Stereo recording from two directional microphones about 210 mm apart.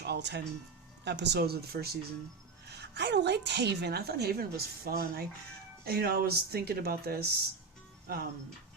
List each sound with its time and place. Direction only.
0.0 s a woman's voice: 55° right (ahead or behind)